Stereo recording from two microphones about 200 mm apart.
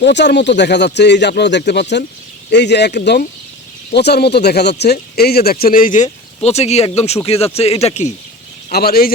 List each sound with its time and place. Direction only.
0.0 s speech: 60° left (ahead or behind); by 8.1 s 35° left (ahead or behind)
8.7 s speech: 50° left (ahead or behind)